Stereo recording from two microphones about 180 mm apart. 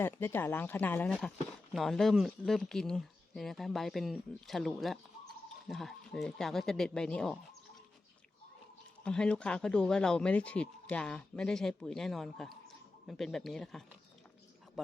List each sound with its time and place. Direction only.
0.0 s speech: 10° left (ahead or behind)
9.0 s speech: 5° left (ahead or behind)